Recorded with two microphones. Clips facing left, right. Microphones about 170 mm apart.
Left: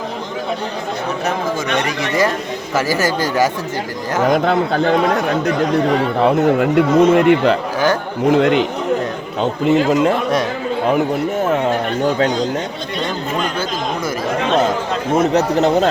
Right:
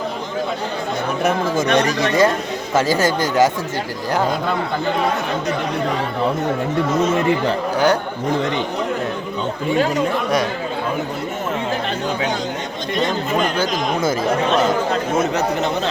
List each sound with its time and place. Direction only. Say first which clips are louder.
1.6 s speech: right 3 dB; 35° right (ahead or behind)
2.7 s speech: right 1 dB; 20° right (ahead or behind)
4.3 s speech: left 6 dB; 75° left (ahead or behind)
6.2 s speech: left 7 dB; 75° left (ahead or behind)
8.3 s speech: left 8 dB; 80° left
9.6 s speech: left 5 dB; 80° left
15.3 s a man's voice: left 6 dB; 40° left (ahead or behind)